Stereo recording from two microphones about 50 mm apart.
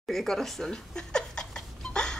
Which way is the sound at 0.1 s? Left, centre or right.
Centre.